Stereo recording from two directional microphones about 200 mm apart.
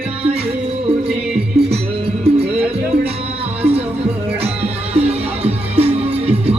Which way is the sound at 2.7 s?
30° right (ahead or behind).